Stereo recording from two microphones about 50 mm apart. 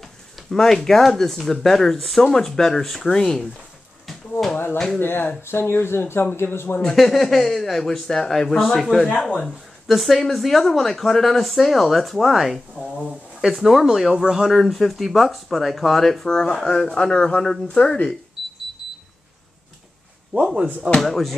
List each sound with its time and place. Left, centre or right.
0.5 s speech: centre
4.1 s a sound: centre
4.9 s a man's voice: left
6.8 s speech: centre
18.4 s a sound: centre
21.0 s speech: centre